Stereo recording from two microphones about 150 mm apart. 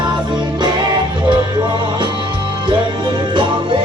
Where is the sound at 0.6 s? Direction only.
30° right (ahead or behind).